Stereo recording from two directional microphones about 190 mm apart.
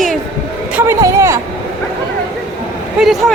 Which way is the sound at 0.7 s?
15° right (ahead or behind).